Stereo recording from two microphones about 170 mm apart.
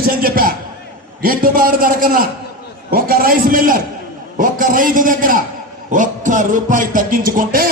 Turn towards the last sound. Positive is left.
turn(degrees=-55)  # may be behind; listen again after turning